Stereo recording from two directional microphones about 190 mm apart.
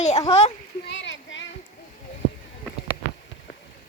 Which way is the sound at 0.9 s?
70° left (ahead or behind).